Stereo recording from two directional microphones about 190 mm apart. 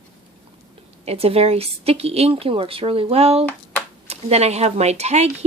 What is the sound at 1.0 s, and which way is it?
Speech, 30° right (ahead or behind).